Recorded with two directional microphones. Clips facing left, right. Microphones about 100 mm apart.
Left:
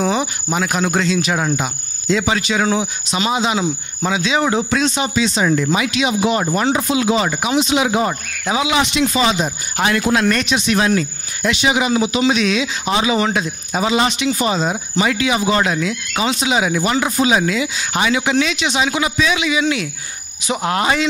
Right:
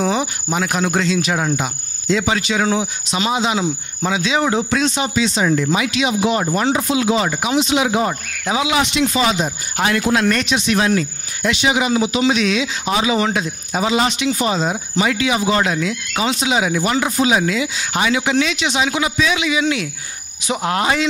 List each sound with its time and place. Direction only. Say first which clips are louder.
0.0 s cricket: even; 15° left (ahead or behind)
5.6 s speech: even; 20° left (ahead or behind)